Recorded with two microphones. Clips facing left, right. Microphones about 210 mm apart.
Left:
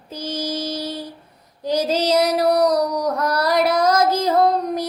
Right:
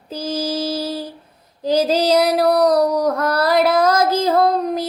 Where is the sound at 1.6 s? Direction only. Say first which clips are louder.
Right 3 dB; 30° right (ahead or behind).